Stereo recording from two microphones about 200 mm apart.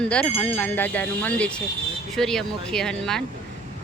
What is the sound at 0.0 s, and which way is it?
Speech, 5° left (ahead or behind).